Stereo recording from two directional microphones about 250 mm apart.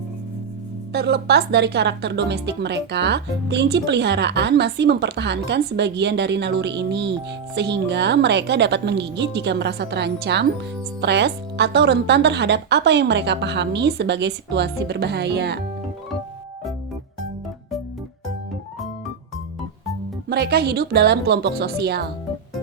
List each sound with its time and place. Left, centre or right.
0.9 s a woman's voice: right
20.3 s a woman's voice: right